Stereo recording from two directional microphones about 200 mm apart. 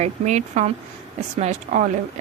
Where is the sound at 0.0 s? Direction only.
35° right (ahead or behind).